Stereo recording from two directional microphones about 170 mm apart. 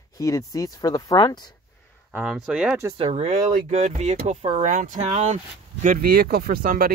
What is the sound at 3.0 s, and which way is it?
Speech, 35° right (ahead or behind).